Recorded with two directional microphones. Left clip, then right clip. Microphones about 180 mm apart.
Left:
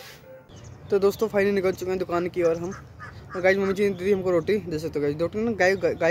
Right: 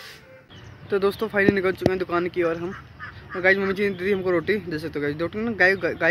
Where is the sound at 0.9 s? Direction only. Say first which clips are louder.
Even; 20° left (ahead or behind).